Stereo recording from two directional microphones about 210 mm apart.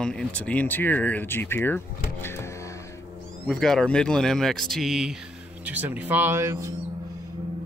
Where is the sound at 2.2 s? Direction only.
10° left (ahead or behind).